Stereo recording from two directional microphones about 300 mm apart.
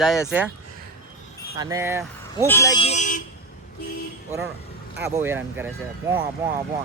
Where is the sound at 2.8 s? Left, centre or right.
Left.